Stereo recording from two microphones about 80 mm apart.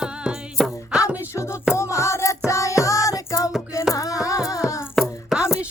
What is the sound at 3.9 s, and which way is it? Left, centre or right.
Music, left.